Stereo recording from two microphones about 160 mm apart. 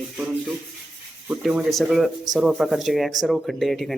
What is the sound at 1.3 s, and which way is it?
A man's voice, 5° right (ahead or behind).